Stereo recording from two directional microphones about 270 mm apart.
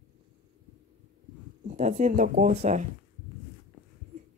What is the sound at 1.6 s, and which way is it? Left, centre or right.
Speech, right.